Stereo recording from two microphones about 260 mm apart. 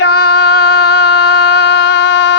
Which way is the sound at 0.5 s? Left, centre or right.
Left.